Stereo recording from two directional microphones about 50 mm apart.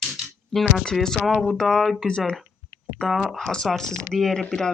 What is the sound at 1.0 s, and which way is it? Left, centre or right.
Speech, centre.